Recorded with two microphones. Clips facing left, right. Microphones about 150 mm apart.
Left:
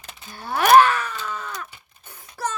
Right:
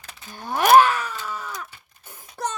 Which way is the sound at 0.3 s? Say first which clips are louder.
Even; 15° right (ahead or behind).